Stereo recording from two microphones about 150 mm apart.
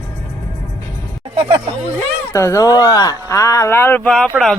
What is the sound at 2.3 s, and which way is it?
Speech, 20° left (ahead or behind).